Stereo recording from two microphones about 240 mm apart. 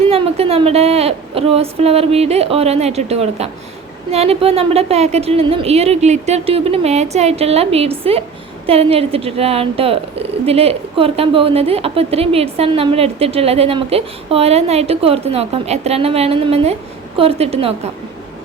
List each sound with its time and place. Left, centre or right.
0.0 s a woman's voice: right